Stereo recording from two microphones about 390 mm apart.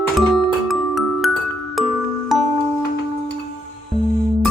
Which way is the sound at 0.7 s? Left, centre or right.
Centre.